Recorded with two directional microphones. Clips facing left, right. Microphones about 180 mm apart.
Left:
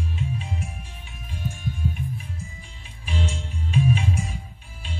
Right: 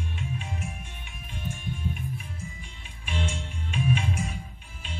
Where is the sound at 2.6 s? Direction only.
35° left (ahead or behind).